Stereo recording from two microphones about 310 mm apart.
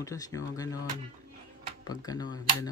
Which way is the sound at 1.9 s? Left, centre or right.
Centre.